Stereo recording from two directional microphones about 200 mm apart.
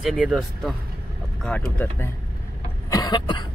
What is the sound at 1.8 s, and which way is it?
Speech, 10° left (ahead or behind).